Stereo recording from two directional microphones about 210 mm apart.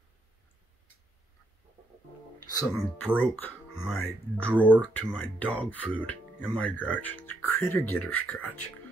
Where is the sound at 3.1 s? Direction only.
10° left (ahead or behind).